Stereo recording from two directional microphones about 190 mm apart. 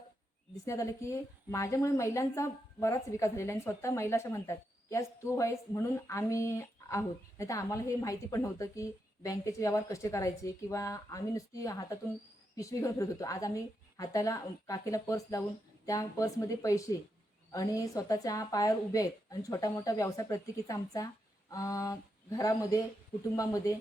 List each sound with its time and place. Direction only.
0.6 s a woman's voice: 15° left (ahead or behind)